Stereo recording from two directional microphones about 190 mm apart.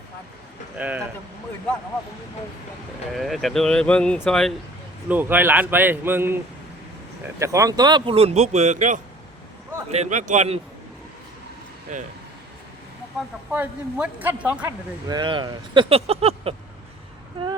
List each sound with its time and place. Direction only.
0.8 s speech: 10° right (ahead or behind)
3.2 s speech: centre (ahead or behind)
5.0 s a man's voice: 10° right (ahead or behind); by 10.6 s 35° right (ahead or behind)
11.9 s a man's voice: 40° right (ahead or behind)
13.1 s speech: 5° right (ahead or behind)
15.0 s speech: 20° right (ahead or behind)